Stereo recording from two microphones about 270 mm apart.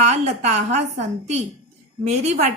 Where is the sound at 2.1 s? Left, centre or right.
Right.